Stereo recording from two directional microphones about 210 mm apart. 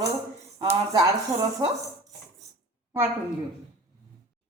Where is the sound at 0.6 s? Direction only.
20° right (ahead or behind).